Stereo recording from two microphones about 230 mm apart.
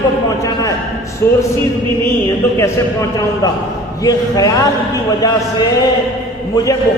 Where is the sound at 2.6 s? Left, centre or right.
Centre.